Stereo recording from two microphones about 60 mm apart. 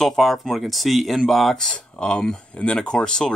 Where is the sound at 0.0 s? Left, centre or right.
Centre.